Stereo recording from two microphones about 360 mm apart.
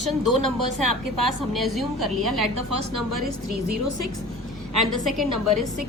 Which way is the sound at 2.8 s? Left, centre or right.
Right.